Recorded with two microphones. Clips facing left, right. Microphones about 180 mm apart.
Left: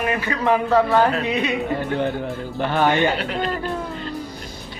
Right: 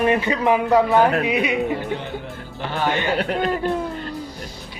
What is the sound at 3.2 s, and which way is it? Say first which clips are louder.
Speech: right 3 dB; 50° right (ahead or behind).